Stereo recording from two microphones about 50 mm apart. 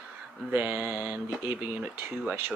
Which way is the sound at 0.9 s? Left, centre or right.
Right.